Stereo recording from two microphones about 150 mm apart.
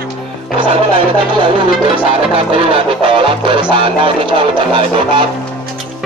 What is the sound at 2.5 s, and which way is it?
Music, 35° right (ahead or behind).